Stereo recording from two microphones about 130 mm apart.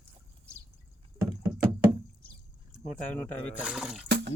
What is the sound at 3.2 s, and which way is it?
Speech, 10° left (ahead or behind).